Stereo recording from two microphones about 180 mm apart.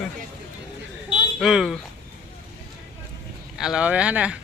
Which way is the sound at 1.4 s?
Centre (ahead or behind).